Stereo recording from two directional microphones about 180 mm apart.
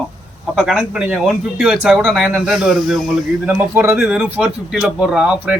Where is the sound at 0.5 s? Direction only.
Centre (ahead or behind).